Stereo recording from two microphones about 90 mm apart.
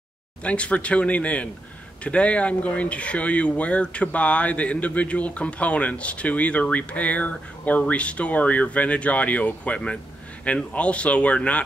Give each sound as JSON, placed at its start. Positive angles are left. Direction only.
{"t": 0.4, "sound": "speech", "side_deg": 15}